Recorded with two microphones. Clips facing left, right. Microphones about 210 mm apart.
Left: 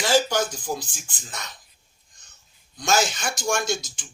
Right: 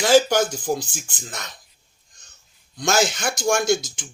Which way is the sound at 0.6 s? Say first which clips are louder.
Right 6 dB; 50° right (ahead or behind).